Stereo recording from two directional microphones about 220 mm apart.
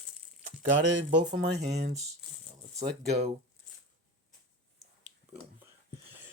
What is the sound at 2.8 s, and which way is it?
Speech, 30° right (ahead or behind).